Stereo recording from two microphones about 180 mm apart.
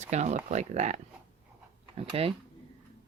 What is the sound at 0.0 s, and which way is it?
Speech, 40° right (ahead or behind).